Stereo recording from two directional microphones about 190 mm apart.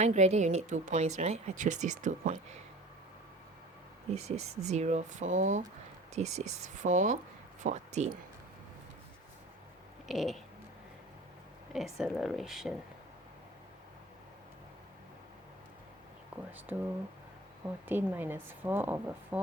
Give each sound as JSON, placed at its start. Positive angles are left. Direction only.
{"t": 0.0, "sound": "speech", "side_deg": -35}
{"t": 4.1, "sound": "speech", "side_deg": -35}
{"t": 10.1, "sound": "speech", "side_deg": 0}
{"t": 11.9, "sound": "speech", "side_deg": 0}
{"t": 16.7, "sound": "a woman's voice", "side_deg": -10}
{"t": 17.8, "sound": "a woman's voice", "side_deg": -10}